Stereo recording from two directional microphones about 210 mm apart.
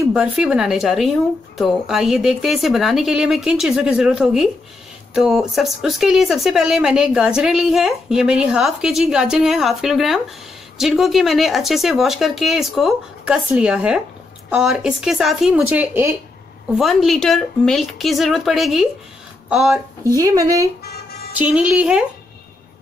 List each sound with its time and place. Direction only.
0.0 s speech: 5° right (ahead or behind)
20.0 s speech: 15° right (ahead or behind)